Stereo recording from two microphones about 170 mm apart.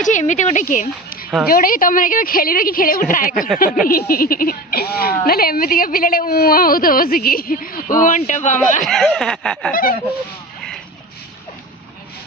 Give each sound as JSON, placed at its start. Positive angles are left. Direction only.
{"t": 0.0, "sound": "speech", "side_deg": 45}
{"t": 8.8, "sound": "speech", "side_deg": 5}
{"t": 9.7, "sound": "speech", "side_deg": 60}